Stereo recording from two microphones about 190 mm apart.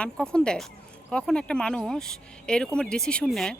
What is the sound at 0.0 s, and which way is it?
A woman's voice, 5° left (ahead or behind).